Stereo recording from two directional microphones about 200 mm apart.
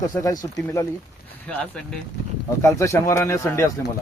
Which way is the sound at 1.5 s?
5° left (ahead or behind).